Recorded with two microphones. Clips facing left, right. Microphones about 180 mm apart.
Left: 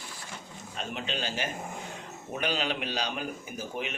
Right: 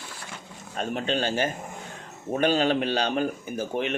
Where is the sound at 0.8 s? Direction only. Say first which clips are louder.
Right 8 dB; 50° right (ahead or behind).